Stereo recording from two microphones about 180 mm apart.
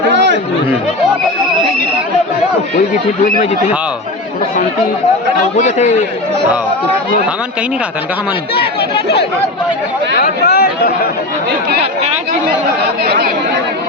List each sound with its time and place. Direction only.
5.5 s a man's voice: 40° left (ahead or behind)
10.2 s speech: 60° left (ahead or behind)
13.1 s speech: 60° right (ahead or behind)